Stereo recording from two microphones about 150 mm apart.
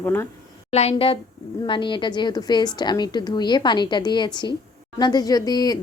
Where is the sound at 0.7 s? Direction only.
45° left (ahead or behind).